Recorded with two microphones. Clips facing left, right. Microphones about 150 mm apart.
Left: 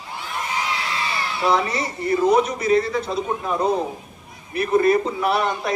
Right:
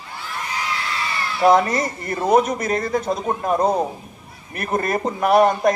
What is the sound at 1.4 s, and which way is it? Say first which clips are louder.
A man's voice: right 6 dB; 45° right (ahead or behind).